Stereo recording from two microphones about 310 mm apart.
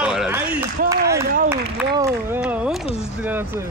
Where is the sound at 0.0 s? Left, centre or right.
Centre.